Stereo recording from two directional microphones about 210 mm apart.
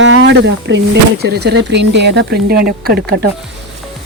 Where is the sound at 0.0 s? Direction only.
60° right (ahead or behind).